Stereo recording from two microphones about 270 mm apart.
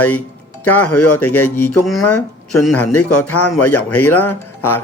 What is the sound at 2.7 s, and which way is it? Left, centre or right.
Speech, left.